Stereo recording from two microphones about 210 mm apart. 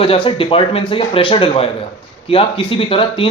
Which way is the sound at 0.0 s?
25° left (ahead or behind).